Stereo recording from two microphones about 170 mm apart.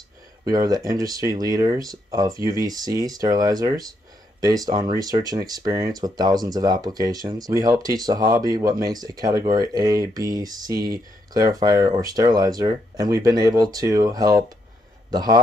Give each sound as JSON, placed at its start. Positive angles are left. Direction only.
{"t": 0.5, "sound": "speech", "side_deg": -20}